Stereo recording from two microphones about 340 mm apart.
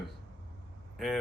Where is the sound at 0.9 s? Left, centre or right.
Centre.